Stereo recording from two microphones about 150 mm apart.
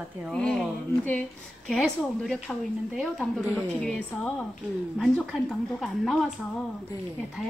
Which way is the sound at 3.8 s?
5° left (ahead or behind).